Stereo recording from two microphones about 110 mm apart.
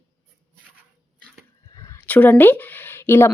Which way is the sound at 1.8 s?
30° left (ahead or behind).